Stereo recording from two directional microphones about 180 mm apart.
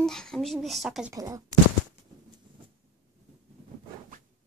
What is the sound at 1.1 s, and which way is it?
Speech, 20° right (ahead or behind).